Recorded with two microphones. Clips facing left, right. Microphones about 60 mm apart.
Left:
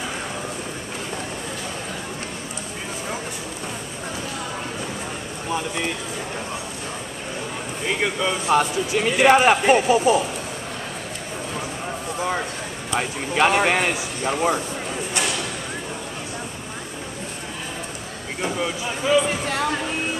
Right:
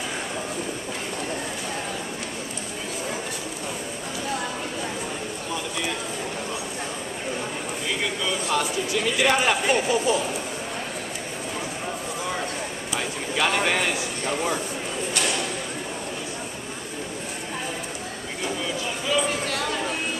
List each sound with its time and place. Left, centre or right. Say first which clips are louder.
8.0 s speech: left 5 dB; left
13.3 s speech: left 5 dB; left
18.4 s a sound: left 3 dB; left